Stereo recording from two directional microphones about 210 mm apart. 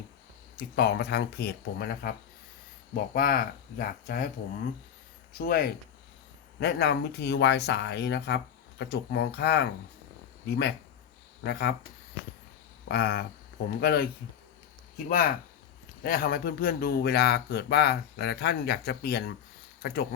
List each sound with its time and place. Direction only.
0.5 s speech: 50° left (ahead or behind)
5.3 s speech: 45° left (ahead or behind)
12.9 s speech: 50° left (ahead or behind)